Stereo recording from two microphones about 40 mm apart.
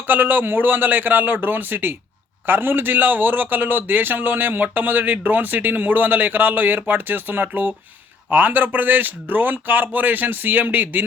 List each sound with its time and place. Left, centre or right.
0.1 s a man's voice: right